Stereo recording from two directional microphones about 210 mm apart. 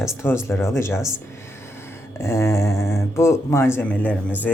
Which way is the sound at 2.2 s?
15° left (ahead or behind).